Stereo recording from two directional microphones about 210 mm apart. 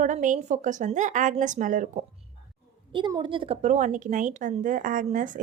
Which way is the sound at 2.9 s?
20° right (ahead or behind).